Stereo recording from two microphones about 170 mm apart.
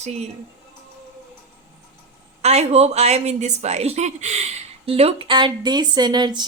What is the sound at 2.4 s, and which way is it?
A woman's voice, 40° right (ahead or behind).